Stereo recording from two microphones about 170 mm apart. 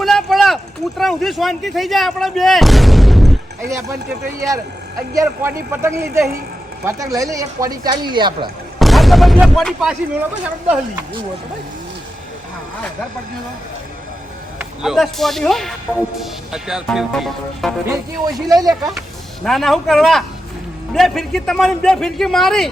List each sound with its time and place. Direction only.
0.0 s speech: centre (ahead or behind)
5.1 s a man's voice: 15° right (ahead or behind)
8.8 s artillery fire: centre (ahead or behind)
14.6 s speech: 5° right (ahead or behind)
18.3 s speech: 20° right (ahead or behind)
18.7 s speech: centre (ahead or behind)